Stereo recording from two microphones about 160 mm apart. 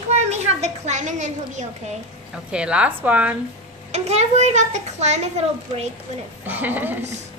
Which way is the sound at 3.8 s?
45° right (ahead or behind).